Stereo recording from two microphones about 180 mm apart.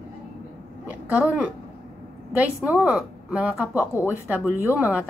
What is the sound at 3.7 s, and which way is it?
Speech, 15° left (ahead or behind).